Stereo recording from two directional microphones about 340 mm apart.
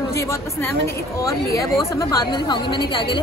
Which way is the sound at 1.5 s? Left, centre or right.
Centre.